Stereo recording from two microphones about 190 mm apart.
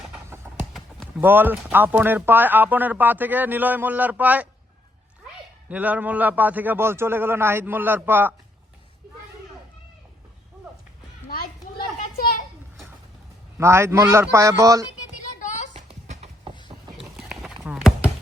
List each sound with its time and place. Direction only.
0.7 s speech: 5° right (ahead or behind)
5.6 s speech: 10° right (ahead or behind)
13.6 s speech: 15° right (ahead or behind)
15.4 s a sound: 40° left (ahead or behind)
15.7 s clip-clop: 35° right (ahead or behind)
17.0 s clip-clop: centre (ahead or behind)